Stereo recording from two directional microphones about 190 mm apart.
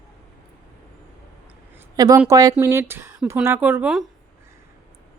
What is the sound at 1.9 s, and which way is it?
A woman's voice, 20° right (ahead or behind).